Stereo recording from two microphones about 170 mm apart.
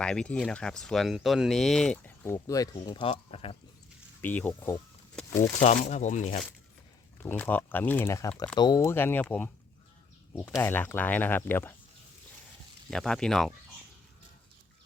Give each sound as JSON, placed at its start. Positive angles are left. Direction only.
{"t": 0.0, "sound": "speech", "side_deg": 5}
{"t": 4.2, "sound": "speech", "side_deg": 10}
{"t": 5.1, "sound": "a sound", "side_deg": 15}
{"t": 5.5, "sound": "speech", "side_deg": 45}
{"t": 7.2, "sound": "speech", "side_deg": 10}
{"t": 10.6, "sound": "speech", "side_deg": 10}
{"t": 12.9, "sound": "speech", "side_deg": 5}